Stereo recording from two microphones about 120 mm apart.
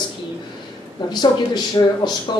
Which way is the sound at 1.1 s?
35° left (ahead or behind).